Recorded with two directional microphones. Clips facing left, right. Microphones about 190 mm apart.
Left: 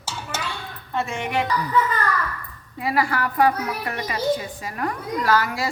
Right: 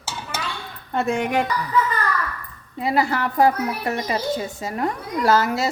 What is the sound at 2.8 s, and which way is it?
A woman's voice, 25° right (ahead or behind).